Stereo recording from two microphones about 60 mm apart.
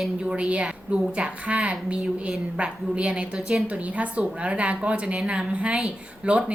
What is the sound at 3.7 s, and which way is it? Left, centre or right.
A woman's voice, right.